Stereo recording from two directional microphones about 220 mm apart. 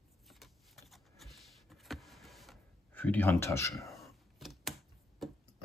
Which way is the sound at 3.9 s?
Centre (ahead or behind).